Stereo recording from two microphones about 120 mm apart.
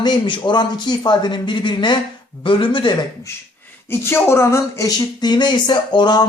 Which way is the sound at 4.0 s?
20° left (ahead or behind).